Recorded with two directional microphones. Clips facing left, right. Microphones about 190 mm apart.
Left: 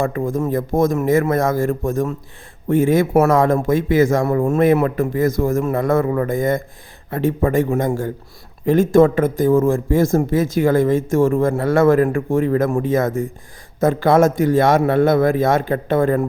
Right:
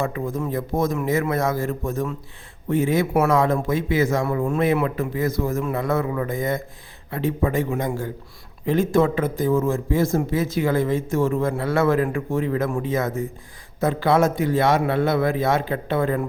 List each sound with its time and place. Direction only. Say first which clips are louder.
0.0 s a man's voice: left 5 dB; 50° left (ahead or behind)